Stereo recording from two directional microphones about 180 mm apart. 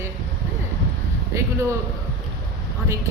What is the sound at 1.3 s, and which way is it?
Speech, 15° right (ahead or behind).